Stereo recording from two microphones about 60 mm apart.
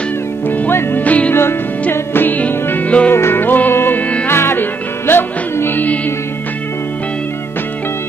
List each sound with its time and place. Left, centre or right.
0.5 s music: left
1.3 s music: left
3.1 s music: left